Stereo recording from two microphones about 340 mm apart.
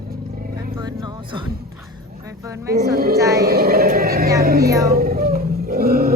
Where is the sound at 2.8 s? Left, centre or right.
Right.